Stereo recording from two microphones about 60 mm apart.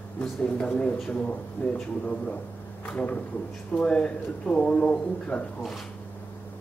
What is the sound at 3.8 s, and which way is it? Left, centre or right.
A man's voice, centre.